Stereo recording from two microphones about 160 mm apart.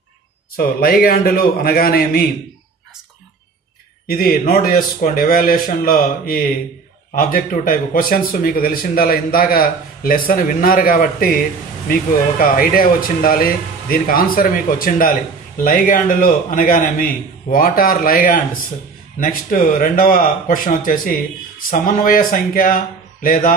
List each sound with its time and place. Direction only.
0.6 s a man's voice: 65° left (ahead or behind)
4.1 s speech: 65° left (ahead or behind)